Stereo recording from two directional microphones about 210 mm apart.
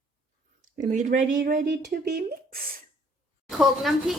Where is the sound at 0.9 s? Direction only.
35° right (ahead or behind).